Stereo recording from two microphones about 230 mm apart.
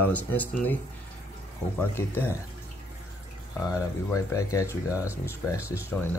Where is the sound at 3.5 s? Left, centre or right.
Centre.